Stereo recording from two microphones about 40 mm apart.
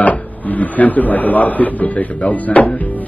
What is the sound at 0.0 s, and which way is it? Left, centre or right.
Speech, left.